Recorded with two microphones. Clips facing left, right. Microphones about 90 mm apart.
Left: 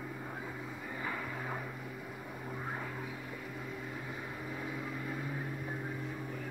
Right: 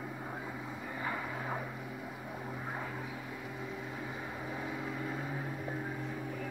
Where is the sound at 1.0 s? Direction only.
10° right (ahead or behind).